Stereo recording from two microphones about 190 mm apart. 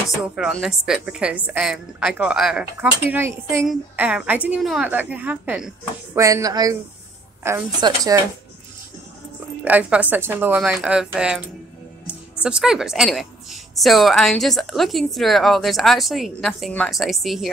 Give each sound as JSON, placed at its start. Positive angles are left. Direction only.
{"t": 0.2, "sound": "a woman's voice", "side_deg": 0}
{"t": 6.1, "sound": "a woman's voice", "side_deg": -15}
{"t": 9.7, "sound": "a woman's voice", "side_deg": -5}
{"t": 12.4, "sound": "a woman's voice", "side_deg": -5}